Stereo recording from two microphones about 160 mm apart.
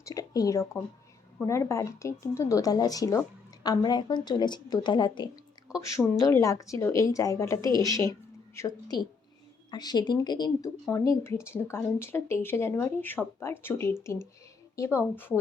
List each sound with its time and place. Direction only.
0.0 s speech: 20° left (ahead or behind)
5.6 s speech: 5° right (ahead or behind)
6.1 s speech: 20° left (ahead or behind)